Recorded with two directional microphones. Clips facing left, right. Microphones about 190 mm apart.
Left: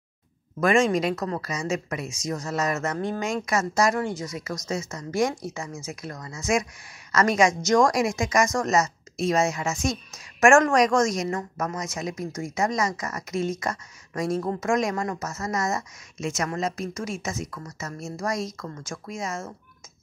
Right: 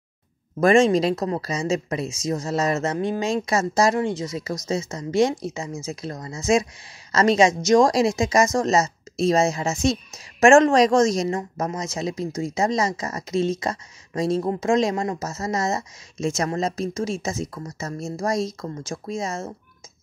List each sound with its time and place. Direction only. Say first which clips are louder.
0.6 s a woman's voice: right 5 dB; 30° right (ahead or behind)